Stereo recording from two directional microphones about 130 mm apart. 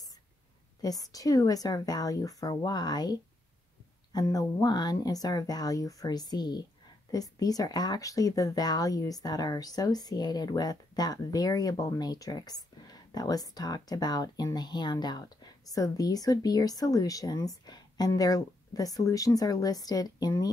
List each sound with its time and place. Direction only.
0.8 s speech: 30° left (ahead or behind)